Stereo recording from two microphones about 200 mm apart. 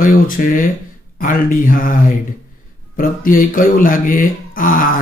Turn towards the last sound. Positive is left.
turn(degrees=45)  # may be behind; listen again after turning